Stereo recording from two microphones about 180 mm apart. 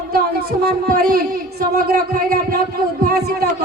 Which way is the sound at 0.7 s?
55° right (ahead or behind).